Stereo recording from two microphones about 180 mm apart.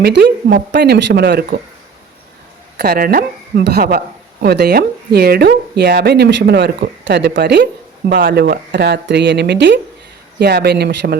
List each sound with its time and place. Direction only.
0.0 s speech: 70° right (ahead or behind)
2.7 s speech: 60° right (ahead or behind)
8.1 s speech: 55° right (ahead or behind); by 9.8 s 75° right (ahead or behind)
10.4 s speech: 65° right (ahead or behind)